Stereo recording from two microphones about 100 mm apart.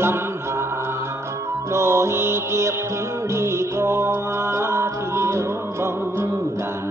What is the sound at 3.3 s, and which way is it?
Music, 25° right (ahead or behind).